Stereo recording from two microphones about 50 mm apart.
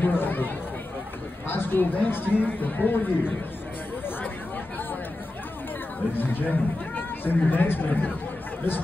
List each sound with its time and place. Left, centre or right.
0.0 s chatter: left
1.5 s speech: left
6.1 s speech: left